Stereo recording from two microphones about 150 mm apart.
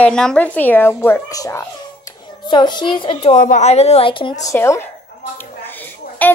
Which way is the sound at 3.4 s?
55° left (ahead or behind).